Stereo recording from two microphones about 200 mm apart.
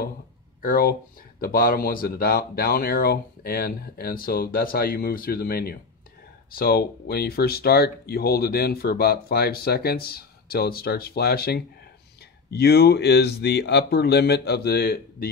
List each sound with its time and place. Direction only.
0.6 s speech: 45° left (ahead or behind)